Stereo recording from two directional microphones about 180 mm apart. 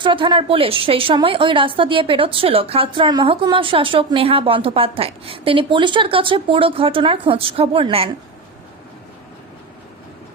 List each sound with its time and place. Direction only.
0.0 s a woman's voice: 25° right (ahead or behind)